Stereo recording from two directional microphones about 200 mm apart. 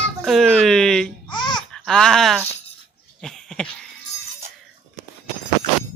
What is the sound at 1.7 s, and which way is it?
Speech, centre (ahead or behind).